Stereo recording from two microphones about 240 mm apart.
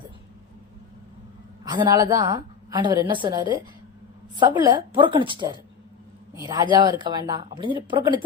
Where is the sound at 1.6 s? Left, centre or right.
Centre.